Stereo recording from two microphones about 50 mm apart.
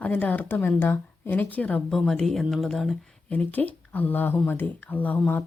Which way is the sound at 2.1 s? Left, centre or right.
Centre.